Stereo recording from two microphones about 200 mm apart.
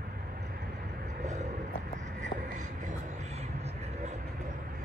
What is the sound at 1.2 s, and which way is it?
Vehicle, 35° right (ahead or behind).